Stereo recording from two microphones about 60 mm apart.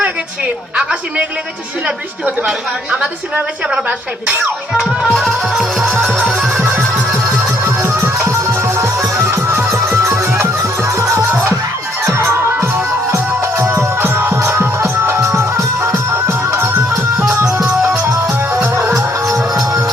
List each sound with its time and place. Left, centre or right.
2.9 s a woman's voice: centre
3.8 s speech: right
4.8 s music: centre
5.5 s a woman's voice: centre
7.1 s music: right
12.0 s music: right